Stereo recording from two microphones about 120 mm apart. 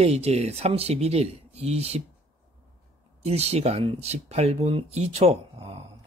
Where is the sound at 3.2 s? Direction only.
60° right (ahead or behind).